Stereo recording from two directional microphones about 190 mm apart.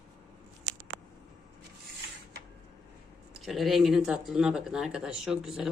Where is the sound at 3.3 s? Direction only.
Centre (ahead or behind).